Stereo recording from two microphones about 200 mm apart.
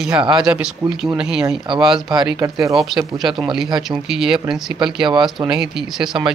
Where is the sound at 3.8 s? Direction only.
Centre (ahead or behind).